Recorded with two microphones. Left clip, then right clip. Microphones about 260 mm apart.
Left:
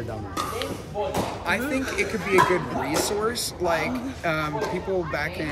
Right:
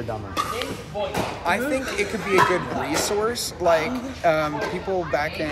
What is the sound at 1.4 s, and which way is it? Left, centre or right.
Speech, centre.